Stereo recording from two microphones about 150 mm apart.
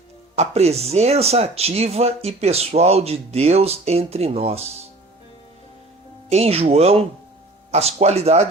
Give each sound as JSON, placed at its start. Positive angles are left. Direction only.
{"t": 0.3, "sound": "speech", "side_deg": -45}
{"t": 6.3, "sound": "speech", "side_deg": -45}